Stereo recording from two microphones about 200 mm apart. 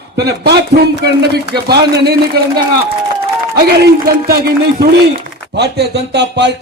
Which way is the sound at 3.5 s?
50° right (ahead or behind).